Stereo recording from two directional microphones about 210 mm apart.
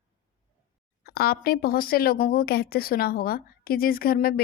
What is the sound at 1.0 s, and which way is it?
A woman's voice, 45° left (ahead or behind).